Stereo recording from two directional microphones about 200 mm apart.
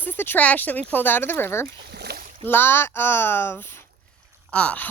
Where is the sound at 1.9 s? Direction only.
55° right (ahead or behind).